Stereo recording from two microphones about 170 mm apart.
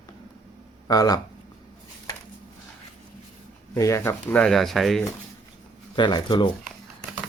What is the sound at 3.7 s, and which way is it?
Speech, 20° left (ahead or behind).